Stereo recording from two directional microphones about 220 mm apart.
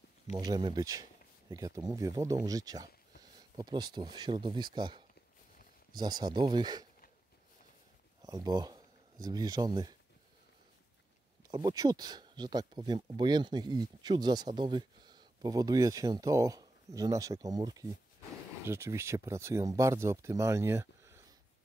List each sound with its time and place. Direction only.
0.4 s speech: 20° right (ahead or behind)
8.2 s speech: 20° right (ahead or behind)
11.5 s speech: 15° right (ahead or behind)